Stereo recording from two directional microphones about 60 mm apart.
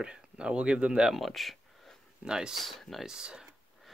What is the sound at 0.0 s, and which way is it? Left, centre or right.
Speech, centre.